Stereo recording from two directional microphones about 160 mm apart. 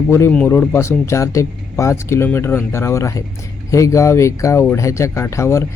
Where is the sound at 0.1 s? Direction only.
15° left (ahead or behind).